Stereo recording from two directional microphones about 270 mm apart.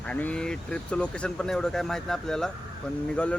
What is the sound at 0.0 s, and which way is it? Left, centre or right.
Speech, centre.